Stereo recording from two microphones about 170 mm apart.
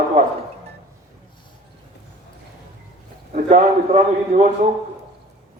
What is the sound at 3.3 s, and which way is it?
A man's voice, 40° right (ahead or behind).